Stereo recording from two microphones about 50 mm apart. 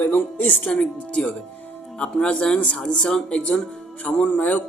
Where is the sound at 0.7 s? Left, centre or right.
Left.